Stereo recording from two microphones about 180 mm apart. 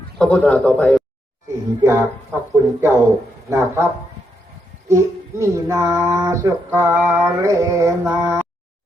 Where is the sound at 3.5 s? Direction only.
15° right (ahead or behind).